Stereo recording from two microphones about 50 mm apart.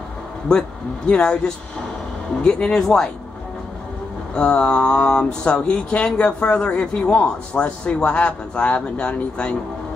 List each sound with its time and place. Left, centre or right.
0.5 s speech: centre
4.4 s a man's voice: centre